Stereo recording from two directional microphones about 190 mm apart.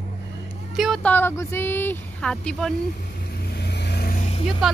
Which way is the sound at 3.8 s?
55° left (ahead or behind).